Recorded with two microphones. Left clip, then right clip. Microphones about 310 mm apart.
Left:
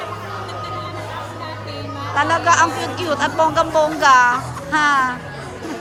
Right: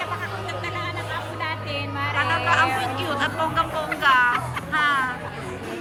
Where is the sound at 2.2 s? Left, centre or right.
Centre.